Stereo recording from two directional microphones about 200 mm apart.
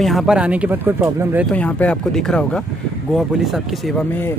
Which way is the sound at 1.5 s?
5° left (ahead or behind).